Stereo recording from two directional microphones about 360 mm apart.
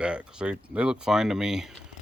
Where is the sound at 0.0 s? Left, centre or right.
Centre.